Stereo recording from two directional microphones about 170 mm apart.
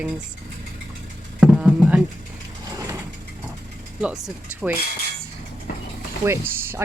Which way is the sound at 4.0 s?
5° right (ahead or behind).